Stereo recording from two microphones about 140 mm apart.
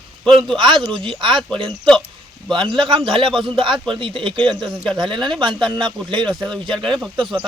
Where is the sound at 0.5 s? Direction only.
35° right (ahead or behind).